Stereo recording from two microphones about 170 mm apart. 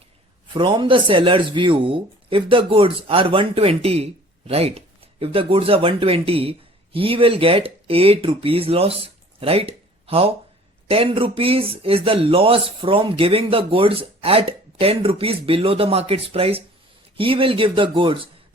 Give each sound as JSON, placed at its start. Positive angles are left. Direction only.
{"t": 0.5, "sound": "speech", "side_deg": -30}